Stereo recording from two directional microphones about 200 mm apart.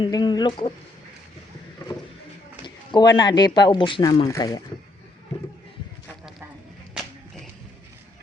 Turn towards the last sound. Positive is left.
turn(degrees=0)  # may be behind; listen again after turning